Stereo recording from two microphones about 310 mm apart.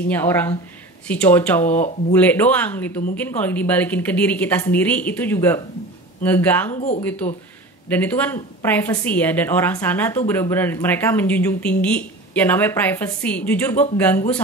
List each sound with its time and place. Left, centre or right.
0.1 s a woman's voice: centre
1.7 s speech: left
2.1 s a woman's voice: centre